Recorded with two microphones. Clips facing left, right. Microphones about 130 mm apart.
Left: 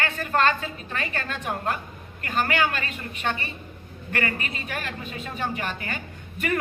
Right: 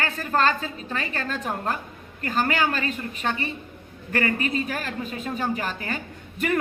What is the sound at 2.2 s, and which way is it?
A woman's voice, 35° right (ahead or behind).